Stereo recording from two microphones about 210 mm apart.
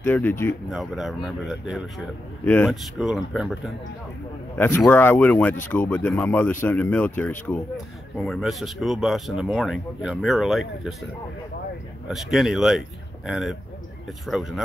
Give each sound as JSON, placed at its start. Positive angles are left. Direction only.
{"t": 0.0, "sound": "speech", "side_deg": 10}
{"t": 0.7, "sound": "a man's voice", "side_deg": 0}
{"t": 2.4, "sound": "a man's voice", "side_deg": 10}
{"t": 4.6, "sound": "a man's voice", "side_deg": 10}
{"t": 12.1, "sound": "a man's voice", "side_deg": 0}